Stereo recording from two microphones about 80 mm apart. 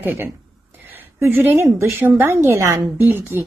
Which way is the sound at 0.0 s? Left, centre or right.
Right.